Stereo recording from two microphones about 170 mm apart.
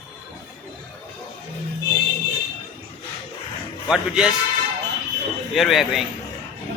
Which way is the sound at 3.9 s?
5° right (ahead or behind).